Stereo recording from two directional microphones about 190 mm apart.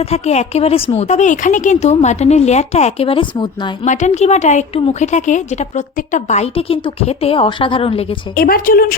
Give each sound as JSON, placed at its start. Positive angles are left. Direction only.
{"t": 0.0, "sound": "a woman's voice", "side_deg": 35}
{"t": 3.8, "sound": "a woman's voice", "side_deg": 40}
{"t": 8.4, "sound": "speech", "side_deg": 50}